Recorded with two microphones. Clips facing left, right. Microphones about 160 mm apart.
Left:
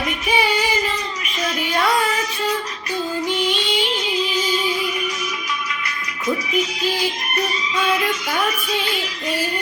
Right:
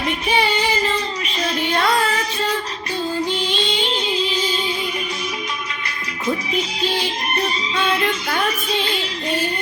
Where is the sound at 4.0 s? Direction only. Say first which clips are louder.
Right 1 dB; 30° right (ahead or behind).